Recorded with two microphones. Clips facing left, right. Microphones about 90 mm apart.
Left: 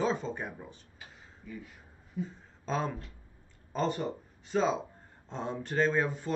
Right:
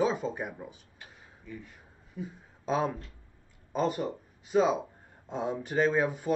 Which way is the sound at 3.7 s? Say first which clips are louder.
Right 2 dB; 5° right (ahead or behind).